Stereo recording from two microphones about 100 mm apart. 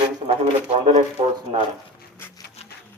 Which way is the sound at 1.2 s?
90° right.